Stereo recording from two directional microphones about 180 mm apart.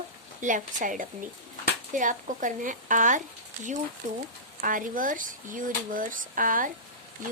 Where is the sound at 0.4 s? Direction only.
45° right (ahead or behind).